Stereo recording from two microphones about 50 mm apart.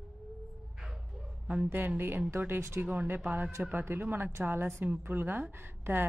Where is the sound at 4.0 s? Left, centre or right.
Right.